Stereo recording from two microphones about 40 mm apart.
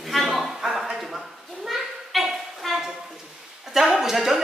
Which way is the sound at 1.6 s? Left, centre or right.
Centre.